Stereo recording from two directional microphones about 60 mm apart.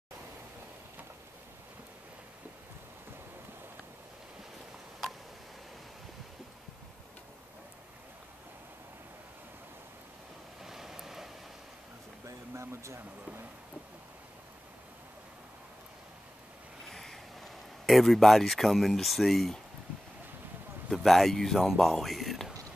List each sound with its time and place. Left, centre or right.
10.6 s waves: centre
12.3 s speech: right
16.8 s speech: centre
20.9 s speech: centre